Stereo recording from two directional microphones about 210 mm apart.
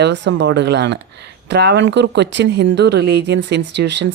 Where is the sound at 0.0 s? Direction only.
55° right (ahead or behind).